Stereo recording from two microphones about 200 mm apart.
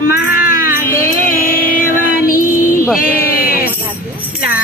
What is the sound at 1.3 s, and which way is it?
Music, 45° left (ahead or behind).